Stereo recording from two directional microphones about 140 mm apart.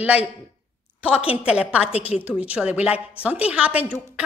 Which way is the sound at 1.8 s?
45° left (ahead or behind).